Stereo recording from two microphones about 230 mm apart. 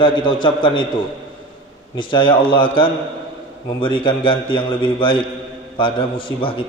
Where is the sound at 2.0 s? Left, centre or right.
Left.